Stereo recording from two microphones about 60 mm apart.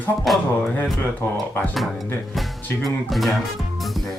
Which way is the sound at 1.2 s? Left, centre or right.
Left.